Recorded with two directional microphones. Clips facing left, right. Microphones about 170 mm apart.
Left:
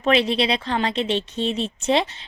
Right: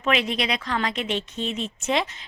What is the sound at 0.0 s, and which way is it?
A woman's voice, 35° left (ahead or behind).